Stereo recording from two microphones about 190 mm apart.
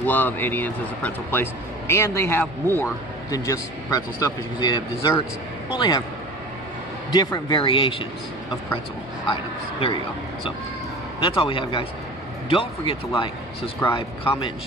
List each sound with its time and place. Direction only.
0.0 s a man's voice: 10° left (ahead or behind)
7.1 s speech: 20° left (ahead or behind)
9.3 s speech: 30° left (ahead or behind)
11.1 s speech: 30° left (ahead or behind)